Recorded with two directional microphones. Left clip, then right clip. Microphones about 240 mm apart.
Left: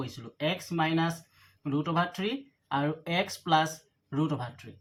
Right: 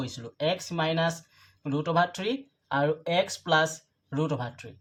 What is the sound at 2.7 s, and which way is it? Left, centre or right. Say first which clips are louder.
Speech: right 4 dB; centre.